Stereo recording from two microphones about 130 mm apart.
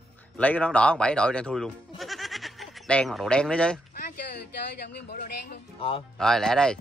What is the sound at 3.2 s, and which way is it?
Speech, 5° left (ahead or behind).